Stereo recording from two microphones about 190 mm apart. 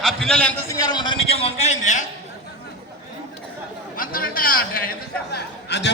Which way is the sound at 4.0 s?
45° left (ahead or behind).